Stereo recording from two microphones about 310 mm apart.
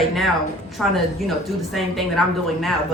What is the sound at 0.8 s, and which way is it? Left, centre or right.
A woman's voice, centre.